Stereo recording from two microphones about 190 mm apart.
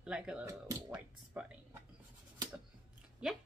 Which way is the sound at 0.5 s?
15° right (ahead or behind).